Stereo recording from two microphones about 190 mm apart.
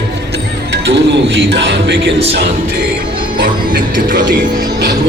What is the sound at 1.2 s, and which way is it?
Speech, 70° right (ahead or behind).